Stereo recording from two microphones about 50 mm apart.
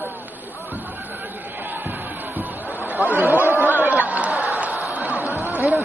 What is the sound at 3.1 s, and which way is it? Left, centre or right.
Chatter, left.